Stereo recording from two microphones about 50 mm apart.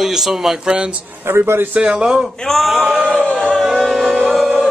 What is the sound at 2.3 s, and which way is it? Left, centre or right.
Speech, centre.